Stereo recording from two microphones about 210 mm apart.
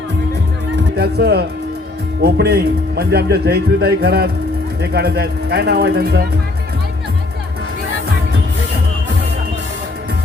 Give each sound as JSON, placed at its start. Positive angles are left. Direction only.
{"t": 0.9, "sound": "a man's voice", "side_deg": -50}